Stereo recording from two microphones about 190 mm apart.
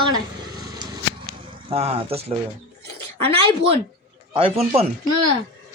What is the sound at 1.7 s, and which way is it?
Speech, 30° right (ahead or behind).